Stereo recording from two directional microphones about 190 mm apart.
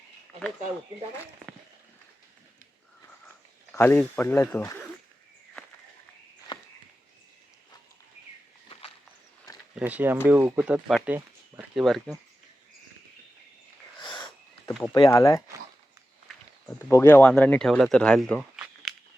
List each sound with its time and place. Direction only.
3.7 s speech: 10° left (ahead or behind)
6.5 s a sound: 25° left (ahead or behind)
9.7 s speech: 10° right (ahead or behind)
14.0 s wheeze: 25° left (ahead or behind)
14.7 s a sound: centre (ahead or behind)
14.9 s speech: 15° left (ahead or behind)
16.6 s speech: 15° left (ahead or behind); by 18.9 s 5° right (ahead or behind)